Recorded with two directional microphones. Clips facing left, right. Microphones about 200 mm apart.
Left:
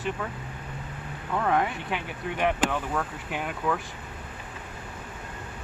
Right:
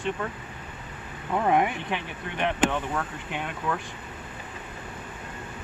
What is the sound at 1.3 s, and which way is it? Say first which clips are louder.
Speech: right 2 dB; 15° right (ahead or behind).